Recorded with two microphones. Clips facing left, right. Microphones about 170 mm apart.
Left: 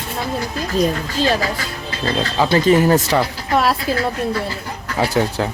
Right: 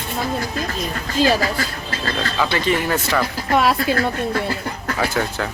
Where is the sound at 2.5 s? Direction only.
40° left (ahead or behind).